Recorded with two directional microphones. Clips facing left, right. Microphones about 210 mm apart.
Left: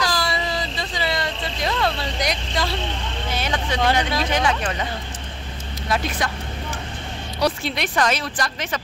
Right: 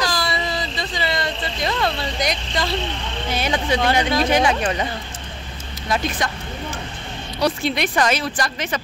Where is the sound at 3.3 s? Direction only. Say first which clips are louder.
Right 4 dB; 10° right (ahead or behind).